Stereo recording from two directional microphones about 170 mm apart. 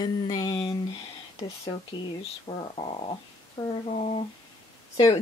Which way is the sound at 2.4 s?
35° left (ahead or behind).